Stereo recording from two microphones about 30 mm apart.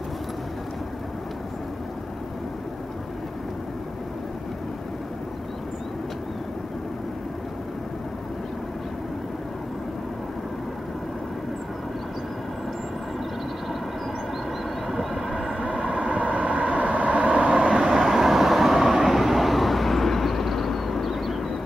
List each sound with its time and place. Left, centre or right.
14.9 s vehicle: centre
15.8 s vehicle: right
17.8 s vehicle: centre